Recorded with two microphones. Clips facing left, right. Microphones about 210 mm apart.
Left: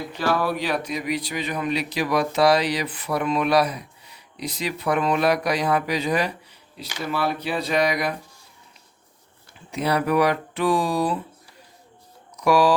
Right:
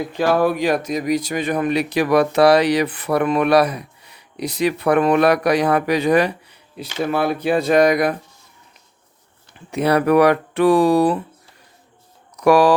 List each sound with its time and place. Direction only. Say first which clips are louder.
0.2 s speech: right 6 dB; 50° right (ahead or behind)
9.7 s speech: right 6 dB; 60° right (ahead or behind)
12.4 s speech: right 5 dB; 60° right (ahead or behind)